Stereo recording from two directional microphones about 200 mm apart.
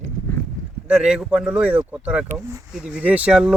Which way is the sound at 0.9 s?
5° right (ahead or behind).